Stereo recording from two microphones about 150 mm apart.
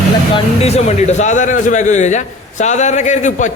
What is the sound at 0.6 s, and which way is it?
A man's voice, 45° left (ahead or behind).